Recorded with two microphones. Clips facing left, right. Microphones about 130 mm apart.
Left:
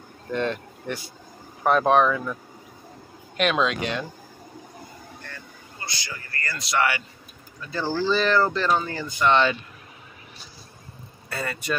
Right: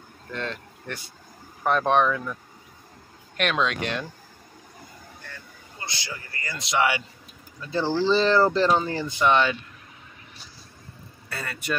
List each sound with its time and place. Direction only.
0.3 s speech: 15° left (ahead or behind)
3.3 s speech: 5° left (ahead or behind)
6.1 s speech: 15° right (ahead or behind)
9.2 s speech: 5° right (ahead or behind)
11.2 s speech: centre (ahead or behind)